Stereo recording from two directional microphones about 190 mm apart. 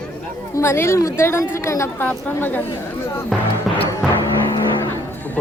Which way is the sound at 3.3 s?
10° left (ahead or behind).